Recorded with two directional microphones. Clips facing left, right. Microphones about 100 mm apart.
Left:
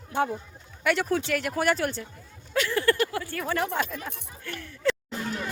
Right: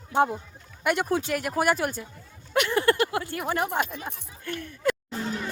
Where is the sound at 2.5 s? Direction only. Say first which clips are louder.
Right 2 dB; 20° right (ahead or behind).